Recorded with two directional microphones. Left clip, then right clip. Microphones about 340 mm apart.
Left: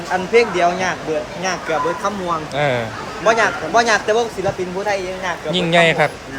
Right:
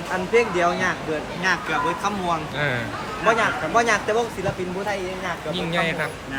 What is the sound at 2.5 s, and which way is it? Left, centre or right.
Speech, centre.